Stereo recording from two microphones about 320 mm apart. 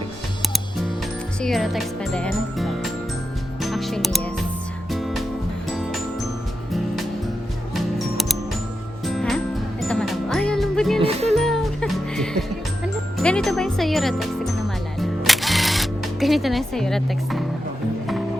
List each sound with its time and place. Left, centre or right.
1.4 s speech: centre
3.6 s music: centre
7.7 s music: centre
11.0 s music: centre
11.3 s music: centre
13.1 s speech: centre
14.9 s music: centre